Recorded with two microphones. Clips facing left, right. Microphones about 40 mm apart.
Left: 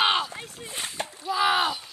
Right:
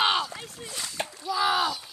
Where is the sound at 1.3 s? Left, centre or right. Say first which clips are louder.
Left 2 dB; left.